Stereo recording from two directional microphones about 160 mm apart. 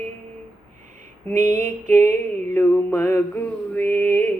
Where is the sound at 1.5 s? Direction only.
50° right (ahead or behind).